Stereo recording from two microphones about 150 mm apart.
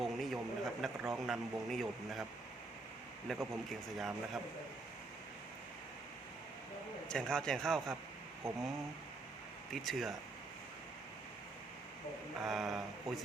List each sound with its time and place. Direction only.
0.0 s speech: centre (ahead or behind)
3.3 s speech: centre (ahead or behind)
7.1 s speech: 5° left (ahead or behind)
9.7 s speech: centre (ahead or behind)
12.4 s speech: centre (ahead or behind)